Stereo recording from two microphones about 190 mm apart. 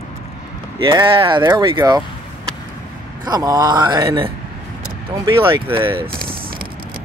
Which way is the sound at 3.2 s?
20° right (ahead or behind).